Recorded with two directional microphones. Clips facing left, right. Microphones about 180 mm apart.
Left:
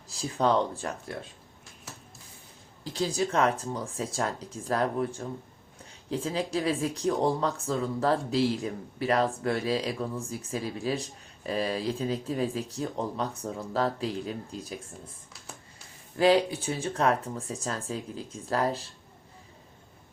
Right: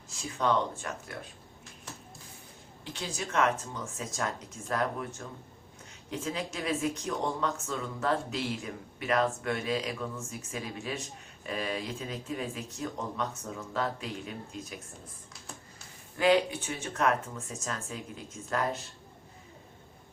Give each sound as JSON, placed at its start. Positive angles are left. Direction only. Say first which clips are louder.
{"t": 0.1, "sound": "speech", "louder": "left 3 dB", "side_deg": 35}
{"t": 2.8, "sound": "speech", "louder": "left 9 dB", "side_deg": 35}
{"t": 16.1, "sound": "speech", "louder": "left 3 dB", "side_deg": 35}